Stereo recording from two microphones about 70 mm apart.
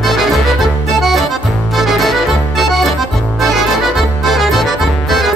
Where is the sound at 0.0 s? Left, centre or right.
Centre.